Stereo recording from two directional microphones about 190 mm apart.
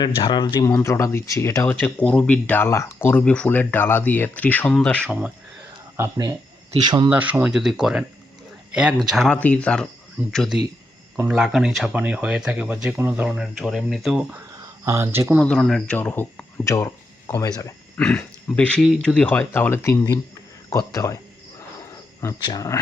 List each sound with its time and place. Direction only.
0.0 s speech: 25° left (ahead or behind); by 5.0 s 5° left (ahead or behind)
5.0 s speech: 10° right (ahead or behind)
6.0 s speech: 20° right (ahead or behind)
15.4 s speech: centre (ahead or behind)
17.6 s a sound: 15° left (ahead or behind)
18.0 s speech: 5° left (ahead or behind)
22.2 s speech: 20° left (ahead or behind)